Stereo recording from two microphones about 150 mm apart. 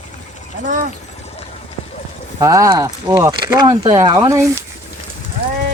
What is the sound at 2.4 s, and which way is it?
Speech, 20° right (ahead or behind).